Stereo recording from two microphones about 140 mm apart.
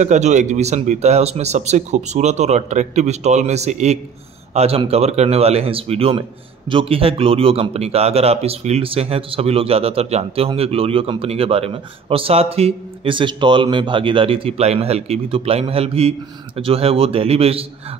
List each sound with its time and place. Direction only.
0.0 s a man's voice: 60° right (ahead or behind)